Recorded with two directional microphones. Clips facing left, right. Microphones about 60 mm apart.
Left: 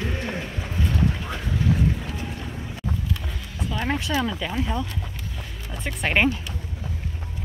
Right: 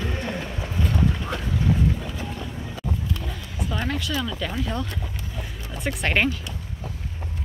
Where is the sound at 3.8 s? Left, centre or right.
Left.